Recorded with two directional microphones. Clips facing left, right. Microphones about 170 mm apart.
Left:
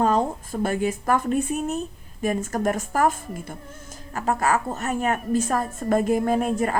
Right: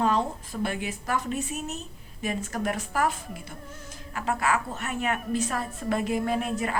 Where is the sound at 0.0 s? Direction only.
45° left (ahead or behind).